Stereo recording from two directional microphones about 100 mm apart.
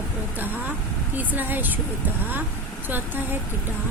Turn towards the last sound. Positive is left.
turn(degrees=-20)  # may be behind; listen again after turning